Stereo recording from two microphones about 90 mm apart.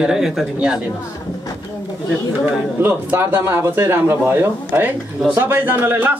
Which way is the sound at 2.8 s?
25° right (ahead or behind).